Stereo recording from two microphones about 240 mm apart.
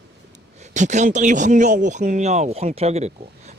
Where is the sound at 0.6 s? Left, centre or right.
Right.